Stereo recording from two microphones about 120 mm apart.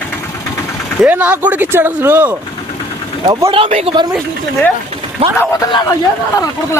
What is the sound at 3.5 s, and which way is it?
Speech, 50° right (ahead or behind).